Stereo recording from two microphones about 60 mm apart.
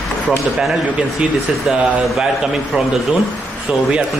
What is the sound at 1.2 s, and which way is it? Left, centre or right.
Speech, centre.